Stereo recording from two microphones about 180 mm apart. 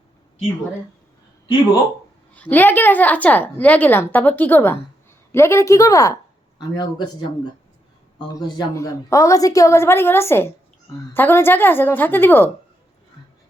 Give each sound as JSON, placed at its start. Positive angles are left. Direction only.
{"t": 2.3, "sound": "a woman's voice", "side_deg": 10}
{"t": 8.3, "sound": "a woman's voice", "side_deg": 20}